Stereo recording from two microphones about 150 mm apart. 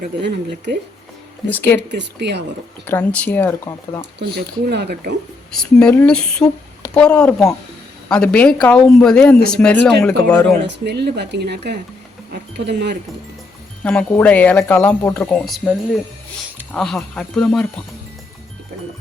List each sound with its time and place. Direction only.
1.5 s speech: 10° left (ahead or behind)
2.8 s speech: 10° left (ahead or behind)
4.4 s speech: 90° right
5.5 s speech: 5° left (ahead or behind)
10.8 s speech: 90° right
13.8 s speech: 10° left (ahead or behind)
16.7 s speech: 5° left (ahead or behind)